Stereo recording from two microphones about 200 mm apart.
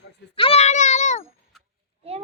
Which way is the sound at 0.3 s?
30° left (ahead or behind).